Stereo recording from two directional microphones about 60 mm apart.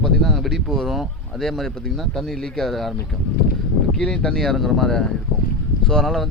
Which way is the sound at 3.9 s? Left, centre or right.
Centre.